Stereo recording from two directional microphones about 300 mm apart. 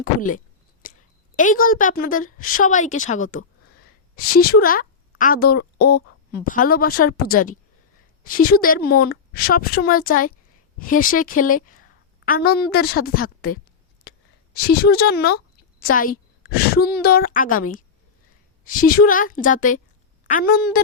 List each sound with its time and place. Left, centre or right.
0.0 s a sound: left
1.4 s a woman's voice: left
4.4 s a woman's voice: left
14.1 s a sound: left
14.5 s a woman's voice: left
18.6 s a woman's voice: left